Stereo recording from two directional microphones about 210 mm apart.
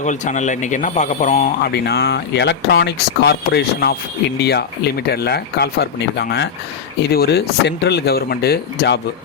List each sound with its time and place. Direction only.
0.0 s speech: 35° left (ahead or behind)
1.7 s speech: 50° left (ahead or behind)